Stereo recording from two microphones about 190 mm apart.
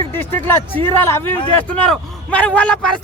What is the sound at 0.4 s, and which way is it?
A man's voice, 10° left (ahead or behind).